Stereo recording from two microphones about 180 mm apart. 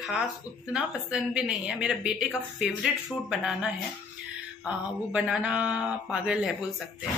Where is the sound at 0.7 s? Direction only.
5° right (ahead or behind).